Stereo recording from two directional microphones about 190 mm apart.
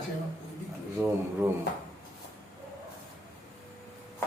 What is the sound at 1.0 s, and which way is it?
Speech, 10° right (ahead or behind).